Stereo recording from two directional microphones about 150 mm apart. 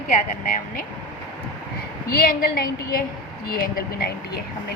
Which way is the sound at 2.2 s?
70° left (ahead or behind).